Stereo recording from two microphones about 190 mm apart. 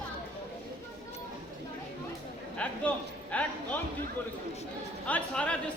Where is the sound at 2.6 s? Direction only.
5° left (ahead or behind).